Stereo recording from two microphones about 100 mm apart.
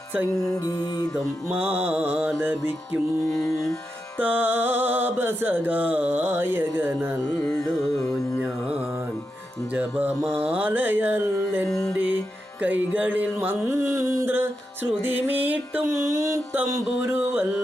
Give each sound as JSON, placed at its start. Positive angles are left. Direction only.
{"t": 0.5, "sound": "music", "side_deg": 35}
{"t": 1.5, "sound": "music", "side_deg": -20}
{"t": 3.2, "sound": "music", "side_deg": 30}
{"t": 4.2, "sound": "music", "side_deg": -20}
{"t": 9.7, "sound": "music", "side_deg": -20}
{"t": 11.7, "sound": "music", "side_deg": 30}
{"t": 12.6, "sound": "music", "side_deg": -15}
{"t": 16.1, "sound": "a sound", "side_deg": -30}
{"t": 16.6, "sound": "music", "side_deg": -30}